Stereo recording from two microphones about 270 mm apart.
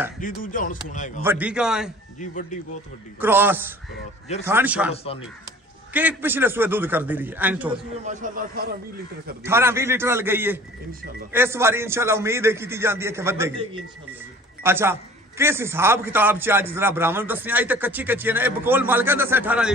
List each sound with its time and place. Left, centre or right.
0.2 s speech: left
1.2 s a man's voice: centre
2.1 s speech: left
3.2 s a man's voice: centre
4.9 s speech: left
5.9 s speech: centre
8.0 s a man's voice: right
9.4 s speech: centre